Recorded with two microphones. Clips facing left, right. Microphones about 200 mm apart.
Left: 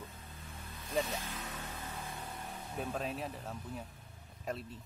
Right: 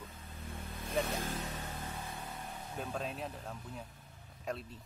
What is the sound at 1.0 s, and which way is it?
Vehicle, 50° right (ahead or behind).